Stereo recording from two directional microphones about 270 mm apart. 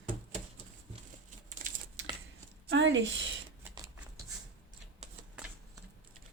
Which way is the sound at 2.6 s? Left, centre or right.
Right.